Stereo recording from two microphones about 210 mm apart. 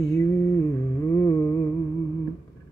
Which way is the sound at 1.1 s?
15° left (ahead or behind).